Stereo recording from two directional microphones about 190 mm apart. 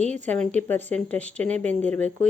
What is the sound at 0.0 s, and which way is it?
Speech, 40° right (ahead or behind).